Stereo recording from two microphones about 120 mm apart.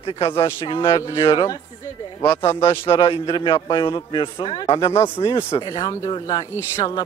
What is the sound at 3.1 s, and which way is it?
A man's voice, 45° left (ahead or behind).